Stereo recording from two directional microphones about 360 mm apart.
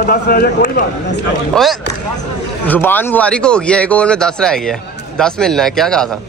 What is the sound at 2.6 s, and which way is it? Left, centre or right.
Speech, centre.